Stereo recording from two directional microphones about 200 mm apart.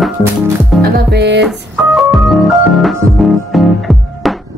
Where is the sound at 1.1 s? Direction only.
60° right (ahead or behind).